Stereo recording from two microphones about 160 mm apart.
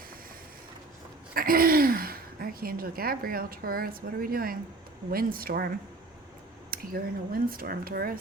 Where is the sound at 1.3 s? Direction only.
65° right (ahead or behind).